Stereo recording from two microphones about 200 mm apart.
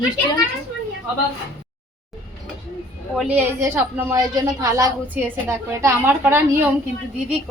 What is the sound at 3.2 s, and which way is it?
A woman's voice, 10° right (ahead or behind).